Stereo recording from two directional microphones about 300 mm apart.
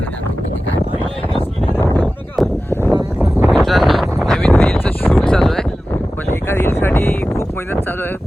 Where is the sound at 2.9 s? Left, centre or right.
Centre.